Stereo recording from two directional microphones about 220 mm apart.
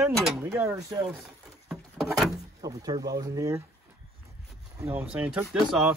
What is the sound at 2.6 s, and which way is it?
Speech, 15° right (ahead or behind).